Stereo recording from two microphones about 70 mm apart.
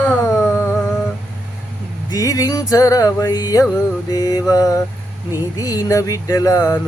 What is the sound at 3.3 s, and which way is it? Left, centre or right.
Music, left.